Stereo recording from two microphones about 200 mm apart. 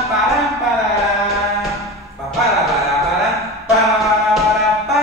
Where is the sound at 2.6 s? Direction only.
Centre (ahead or behind).